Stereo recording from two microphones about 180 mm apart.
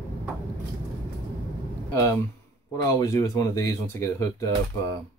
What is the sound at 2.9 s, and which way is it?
Speech, 15° left (ahead or behind).